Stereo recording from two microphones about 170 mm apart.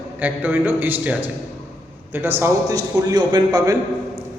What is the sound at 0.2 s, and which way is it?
A man's voice, 10° right (ahead or behind).